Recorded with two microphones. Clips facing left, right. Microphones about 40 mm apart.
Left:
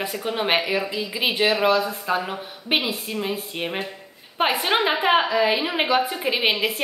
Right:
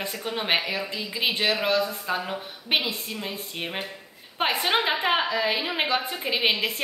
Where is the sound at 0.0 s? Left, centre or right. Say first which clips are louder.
Left 5 dB; centre.